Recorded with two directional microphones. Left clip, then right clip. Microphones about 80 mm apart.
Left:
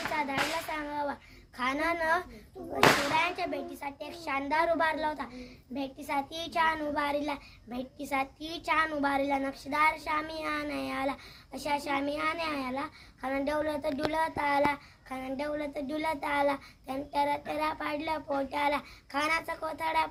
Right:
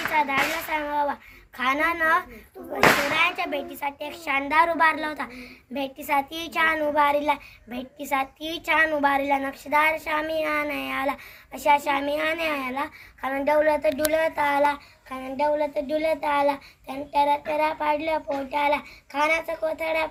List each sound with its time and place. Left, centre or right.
0.1 s a sound: left
1.5 s a woman's voice: left
3.8 s a woman's voice: centre
4.3 s a woman's voice: centre
5.1 s speech: right
5.7 s a woman's voice: centre
6.5 s child singing: left
13.4 s speech: left
14.7 s child singing: left